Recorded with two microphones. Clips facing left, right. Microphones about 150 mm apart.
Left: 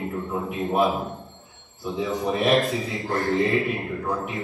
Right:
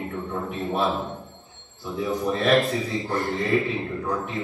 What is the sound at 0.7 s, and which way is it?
Speech, 10° left (ahead or behind).